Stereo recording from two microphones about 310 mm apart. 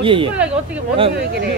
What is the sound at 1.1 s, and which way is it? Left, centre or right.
Speech, right.